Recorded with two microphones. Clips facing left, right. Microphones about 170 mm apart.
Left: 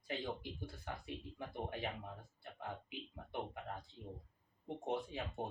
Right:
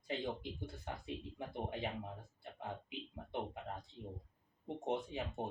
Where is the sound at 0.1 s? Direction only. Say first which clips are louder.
Right 2 dB; 25° right (ahead or behind).